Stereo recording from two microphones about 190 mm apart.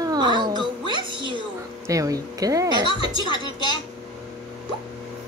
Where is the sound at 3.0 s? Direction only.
25° left (ahead or behind).